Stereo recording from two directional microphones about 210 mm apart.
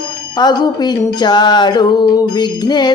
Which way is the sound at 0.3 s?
20° left (ahead or behind).